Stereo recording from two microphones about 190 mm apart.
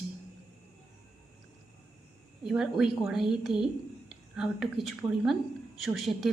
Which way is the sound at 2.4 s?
5° right (ahead or behind).